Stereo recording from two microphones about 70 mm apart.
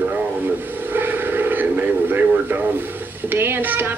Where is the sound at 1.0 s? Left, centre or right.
Right.